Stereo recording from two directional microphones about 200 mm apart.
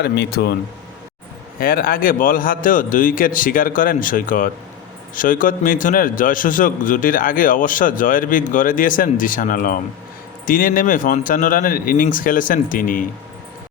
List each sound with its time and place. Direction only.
0.0 s a man's voice: 55° left (ahead or behind)
1.5 s a man's voice: 45° left (ahead or behind)